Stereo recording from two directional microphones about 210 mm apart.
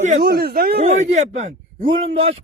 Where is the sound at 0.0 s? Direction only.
40° right (ahead or behind).